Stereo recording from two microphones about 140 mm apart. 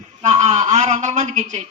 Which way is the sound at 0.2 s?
55° right (ahead or behind).